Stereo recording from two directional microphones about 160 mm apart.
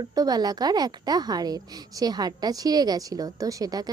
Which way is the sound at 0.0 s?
25° right (ahead or behind).